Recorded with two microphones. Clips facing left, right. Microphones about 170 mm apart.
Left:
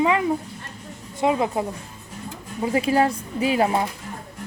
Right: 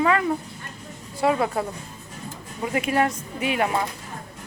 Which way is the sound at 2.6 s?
30° left (ahead or behind).